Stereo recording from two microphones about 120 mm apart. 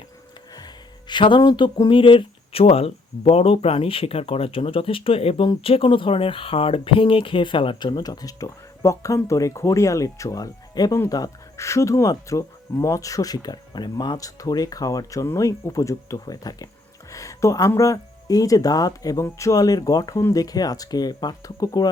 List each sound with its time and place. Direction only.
0.5 s speech: 35° left (ahead or behind)